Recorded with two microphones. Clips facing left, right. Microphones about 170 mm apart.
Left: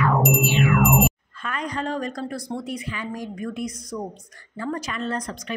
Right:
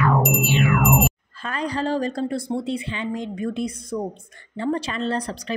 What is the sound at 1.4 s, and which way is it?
A woman's voice, 30° right (ahead or behind).